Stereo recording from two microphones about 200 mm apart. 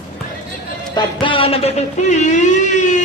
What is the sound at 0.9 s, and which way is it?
Speech, 25° left (ahead or behind).